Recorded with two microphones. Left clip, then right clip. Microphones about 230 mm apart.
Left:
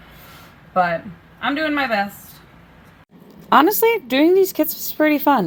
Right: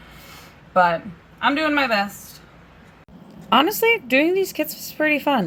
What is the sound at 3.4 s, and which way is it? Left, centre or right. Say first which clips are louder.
Speech: left 3 dB; left.